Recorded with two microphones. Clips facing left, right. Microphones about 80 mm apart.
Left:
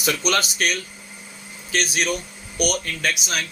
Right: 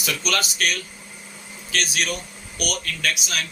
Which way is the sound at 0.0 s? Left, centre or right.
Left.